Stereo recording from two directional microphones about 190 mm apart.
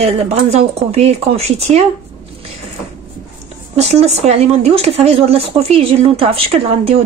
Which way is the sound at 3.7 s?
35° right (ahead or behind).